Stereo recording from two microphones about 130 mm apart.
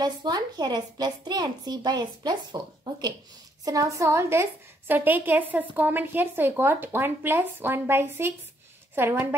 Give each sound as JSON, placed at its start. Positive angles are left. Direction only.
{"t": 0.0, "sound": "a woman's voice", "side_deg": -35}